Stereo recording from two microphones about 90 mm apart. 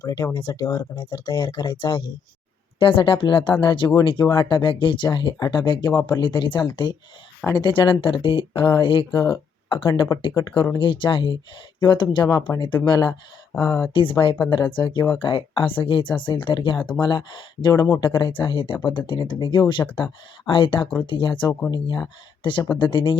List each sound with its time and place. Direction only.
0.0 s speech: 45° left (ahead or behind)
0.9 s speech: 65° left (ahead or behind)
2.7 s speech: 80° left; by 13.1 s 60° left (ahead or behind)
13.6 s speech: 35° left (ahead or behind)
13.9 s speech: 70° left (ahead or behind)
15.2 s speech: 75° left (ahead or behind)